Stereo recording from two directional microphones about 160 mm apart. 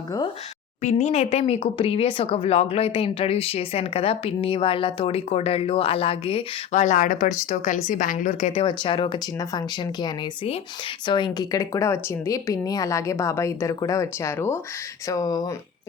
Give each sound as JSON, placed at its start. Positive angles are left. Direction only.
{"t": 0.8, "sound": "speech", "side_deg": 45}
{"t": 6.7, "sound": "a woman's voice", "side_deg": 50}
{"t": 8.6, "sound": "speech", "side_deg": 30}